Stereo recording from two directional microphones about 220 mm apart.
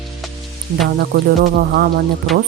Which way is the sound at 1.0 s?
45° right (ahead or behind).